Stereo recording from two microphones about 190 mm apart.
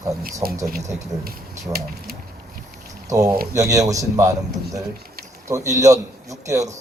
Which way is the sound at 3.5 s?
15° right (ahead or behind).